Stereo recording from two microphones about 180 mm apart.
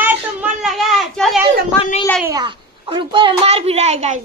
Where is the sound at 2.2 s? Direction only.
20° right (ahead or behind).